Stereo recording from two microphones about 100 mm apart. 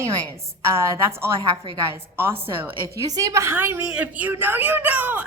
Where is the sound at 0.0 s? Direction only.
30° right (ahead or behind).